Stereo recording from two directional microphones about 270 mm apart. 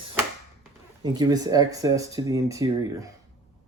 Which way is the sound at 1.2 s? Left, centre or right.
Centre.